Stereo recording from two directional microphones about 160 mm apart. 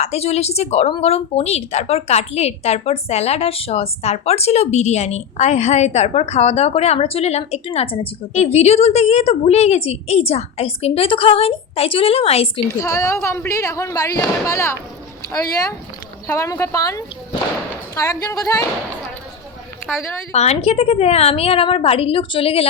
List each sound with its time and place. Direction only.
0.0 s speech: 40° left (ahead or behind)
12.6 s a woman's voice: 20° left (ahead or behind)
16.2 s a woman's voice: 15° left (ahead or behind)
20.3 s speech: 40° left (ahead or behind)